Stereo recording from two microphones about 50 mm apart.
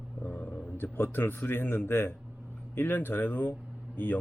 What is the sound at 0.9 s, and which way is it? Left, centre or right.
A man's voice, left.